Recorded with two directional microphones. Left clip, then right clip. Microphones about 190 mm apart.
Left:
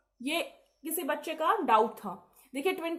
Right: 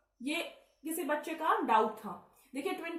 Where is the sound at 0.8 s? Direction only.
50° left (ahead or behind).